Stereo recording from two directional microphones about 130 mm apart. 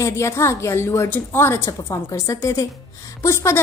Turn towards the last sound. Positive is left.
turn(degrees=20)  # may be behind; listen again after turning